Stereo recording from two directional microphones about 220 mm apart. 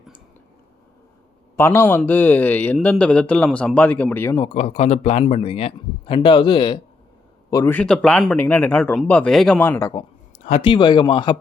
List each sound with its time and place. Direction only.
1.5 s a man's voice: 10° left (ahead or behind)
4.4 s a man's voice: 30° left (ahead or behind)
7.5 s a man's voice: 10° left (ahead or behind)
10.4 s a man's voice: 25° left (ahead or behind)